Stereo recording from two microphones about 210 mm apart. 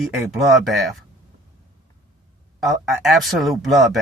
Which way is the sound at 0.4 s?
Centre (ahead or behind).